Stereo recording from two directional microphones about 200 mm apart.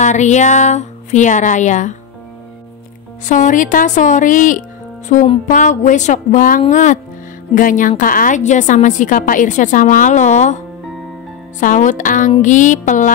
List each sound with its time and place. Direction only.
0.0 s speech: 35° left (ahead or behind)
3.3 s speech: 40° left (ahead or behind)
11.6 s speech: 40° left (ahead or behind)